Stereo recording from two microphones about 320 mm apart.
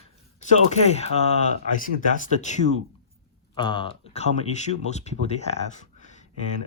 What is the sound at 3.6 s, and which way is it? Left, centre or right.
Speech, centre.